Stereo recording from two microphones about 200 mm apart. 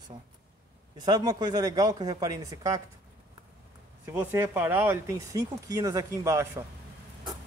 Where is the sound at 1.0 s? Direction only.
20° right (ahead or behind).